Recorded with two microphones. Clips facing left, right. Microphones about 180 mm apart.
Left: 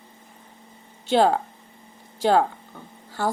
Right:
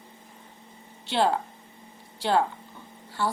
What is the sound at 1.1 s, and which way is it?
A woman's voice, 45° left (ahead or behind).